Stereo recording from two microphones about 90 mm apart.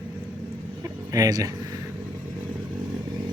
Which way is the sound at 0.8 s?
40° right (ahead or behind).